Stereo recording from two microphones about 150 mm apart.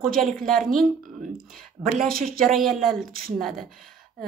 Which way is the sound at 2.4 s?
Centre (ahead or behind).